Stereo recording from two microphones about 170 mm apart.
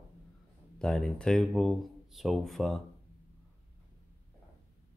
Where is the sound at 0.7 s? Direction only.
5° left (ahead or behind).